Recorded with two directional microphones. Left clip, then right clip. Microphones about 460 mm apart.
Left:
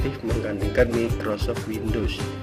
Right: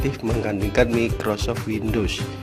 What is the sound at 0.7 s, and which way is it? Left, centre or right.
Speech, centre.